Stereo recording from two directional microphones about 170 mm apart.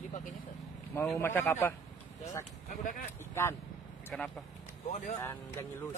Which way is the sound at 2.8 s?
50° left (ahead or behind).